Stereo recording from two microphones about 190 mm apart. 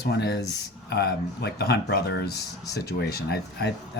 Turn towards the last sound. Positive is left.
turn(degrees=60)  # may be behind; listen again after turning